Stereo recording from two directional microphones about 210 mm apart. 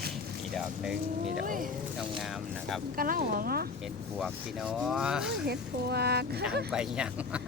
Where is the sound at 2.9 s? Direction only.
45° right (ahead or behind).